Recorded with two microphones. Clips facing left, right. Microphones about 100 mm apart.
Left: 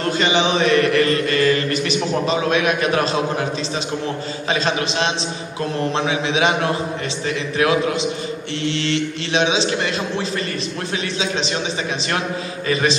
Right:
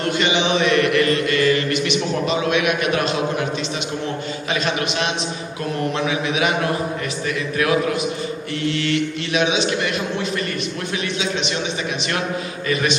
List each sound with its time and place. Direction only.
0.0 s mantra: 35° left (ahead or behind)
5.9 s mantra: 30° left (ahead or behind)